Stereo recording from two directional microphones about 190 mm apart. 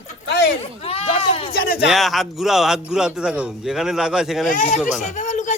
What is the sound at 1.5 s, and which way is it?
Speech, 50° left (ahead or behind).